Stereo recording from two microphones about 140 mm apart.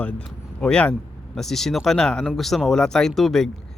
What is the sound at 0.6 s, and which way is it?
Speech, 10° left (ahead or behind).